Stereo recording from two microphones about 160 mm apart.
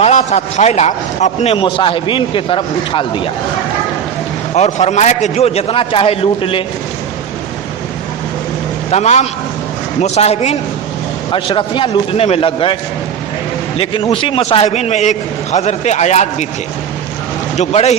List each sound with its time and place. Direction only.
0.0 s a man's voice: 45° left (ahead or behind)
1.6 s a man's voice: 35° left (ahead or behind)
4.5 s a man's voice: 45° left (ahead or behind)
8.9 s a man's voice: 45° left (ahead or behind)
13.7 s a man's voice: 35° left (ahead or behind)
17.6 s speech: 45° left (ahead or behind)